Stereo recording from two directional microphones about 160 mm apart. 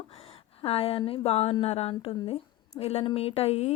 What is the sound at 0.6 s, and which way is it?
A woman's voice, 35° left (ahead or behind).